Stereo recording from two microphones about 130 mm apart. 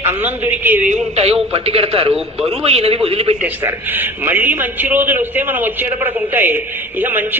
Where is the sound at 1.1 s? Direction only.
55° right (ahead or behind).